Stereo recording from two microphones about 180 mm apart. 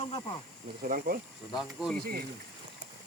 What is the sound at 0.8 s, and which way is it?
Speech, 50° right (ahead or behind).